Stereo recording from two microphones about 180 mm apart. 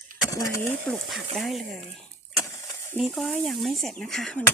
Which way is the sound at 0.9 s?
Centre (ahead or behind).